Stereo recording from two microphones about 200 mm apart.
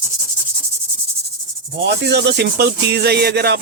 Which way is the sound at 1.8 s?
55° right (ahead or behind).